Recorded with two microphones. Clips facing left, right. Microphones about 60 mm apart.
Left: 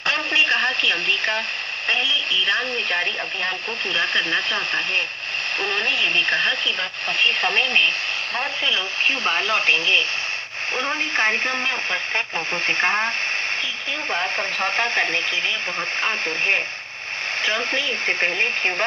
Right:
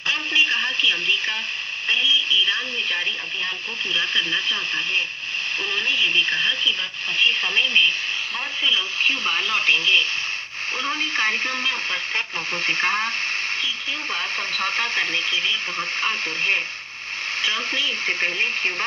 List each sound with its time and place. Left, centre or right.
0.0 s radio: left
1.9 s speech: left
9.0 s speech: left